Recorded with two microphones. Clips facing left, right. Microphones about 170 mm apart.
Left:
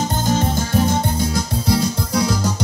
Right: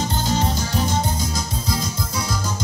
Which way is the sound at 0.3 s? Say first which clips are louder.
Left 5 dB; 50° left (ahead or behind).